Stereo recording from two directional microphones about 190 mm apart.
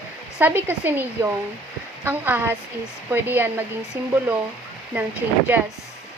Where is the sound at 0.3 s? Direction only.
10° right (ahead or behind).